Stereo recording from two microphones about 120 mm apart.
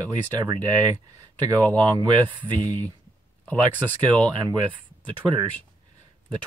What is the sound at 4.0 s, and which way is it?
Speech, 40° right (ahead or behind).